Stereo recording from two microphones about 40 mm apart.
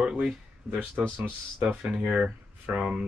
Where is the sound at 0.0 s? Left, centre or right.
Right.